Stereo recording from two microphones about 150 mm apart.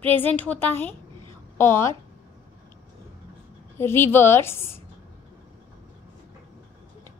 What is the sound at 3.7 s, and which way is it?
A woman's voice, 15° left (ahead or behind).